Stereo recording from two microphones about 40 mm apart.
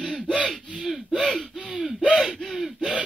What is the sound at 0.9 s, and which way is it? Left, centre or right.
Speech, centre.